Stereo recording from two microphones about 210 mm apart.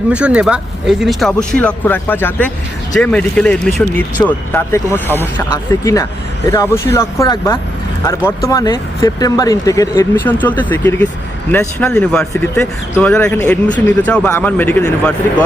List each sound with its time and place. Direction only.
0.1 s speech: 5° right (ahead or behind)